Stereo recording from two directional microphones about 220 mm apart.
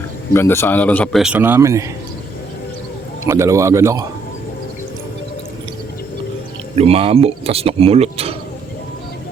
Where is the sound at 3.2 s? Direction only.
15° right (ahead or behind).